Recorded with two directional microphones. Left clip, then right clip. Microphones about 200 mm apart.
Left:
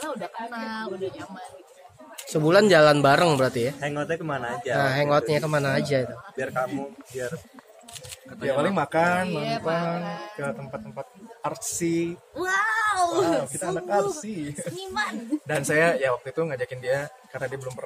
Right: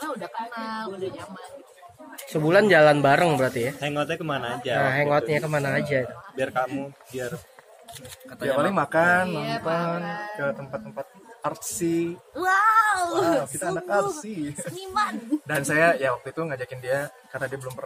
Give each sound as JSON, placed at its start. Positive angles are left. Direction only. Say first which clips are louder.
{"t": 0.0, "sound": "speech", "louder": "right 1 dB", "side_deg": -10}
{"t": 2.2, "sound": "speech", "louder": "even", "side_deg": 15}
{"t": 3.8, "sound": "speech", "louder": "right 1 dB", "side_deg": -40}
{"t": 4.7, "sound": "speech", "louder": "even", "side_deg": 15}
{"t": 6.3, "sound": "speech", "louder": "right 2 dB", "side_deg": -40}
{"t": 8.7, "sound": "speech", "louder": "right 2 dB", "side_deg": 5}
{"t": 9.3, "sound": "speech", "louder": "even", "side_deg": -10}
{"t": 10.4, "sound": "speech", "louder": "right 3 dB", "side_deg": 5}
{"t": 12.4, "sound": "speech", "louder": "right 5 dB", "side_deg": -10}
{"t": 13.6, "sound": "speech", "louder": "even", "side_deg": 5}
{"t": 14.8, "sound": "speech", "louder": "right 4 dB", "side_deg": -10}
{"t": 15.4, "sound": "speech", "louder": "right 1 dB", "side_deg": 5}